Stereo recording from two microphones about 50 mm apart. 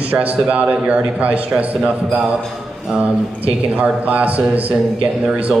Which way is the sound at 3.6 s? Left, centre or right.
Right.